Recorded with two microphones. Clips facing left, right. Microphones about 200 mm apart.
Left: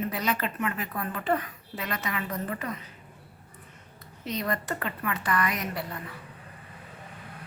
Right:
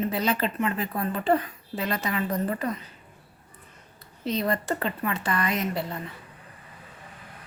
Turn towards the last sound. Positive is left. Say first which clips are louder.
# right 4 dB
turn(degrees=-25)  # may be behind; listen again after turning